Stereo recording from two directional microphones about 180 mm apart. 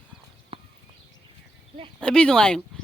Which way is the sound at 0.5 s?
30° right (ahead or behind).